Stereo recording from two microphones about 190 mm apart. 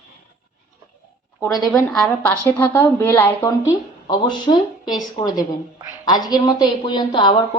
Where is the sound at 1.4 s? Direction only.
20° left (ahead or behind).